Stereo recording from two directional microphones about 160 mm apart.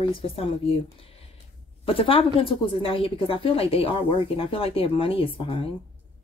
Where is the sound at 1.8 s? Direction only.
35° left (ahead or behind).